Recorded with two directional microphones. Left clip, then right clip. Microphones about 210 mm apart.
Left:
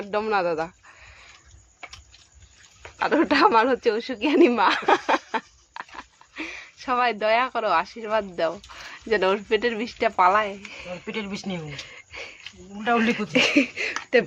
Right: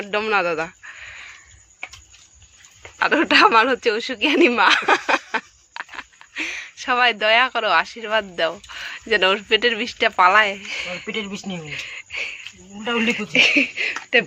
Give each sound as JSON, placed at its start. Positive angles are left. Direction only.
{"t": 0.0, "sound": "a sound", "side_deg": 0}
{"t": 3.0, "sound": "speech", "side_deg": 5}
{"t": 11.1, "sound": "speech", "side_deg": -20}
{"t": 11.6, "sound": "cricket", "side_deg": 10}
{"t": 12.8, "sound": "speech", "side_deg": 0}
{"t": 13.1, "sound": "a sound", "side_deg": 25}